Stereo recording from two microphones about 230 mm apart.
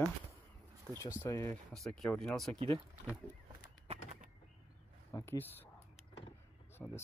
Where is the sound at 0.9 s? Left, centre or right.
Centre.